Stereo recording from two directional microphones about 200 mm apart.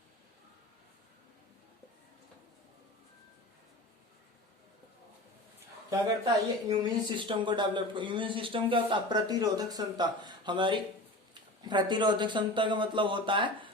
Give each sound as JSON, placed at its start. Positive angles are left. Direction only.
{"t": 5.9, "sound": "a man's voice", "side_deg": -20}